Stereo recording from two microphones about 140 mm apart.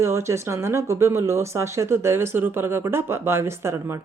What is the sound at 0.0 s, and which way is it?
Speech, 20° right (ahead or behind).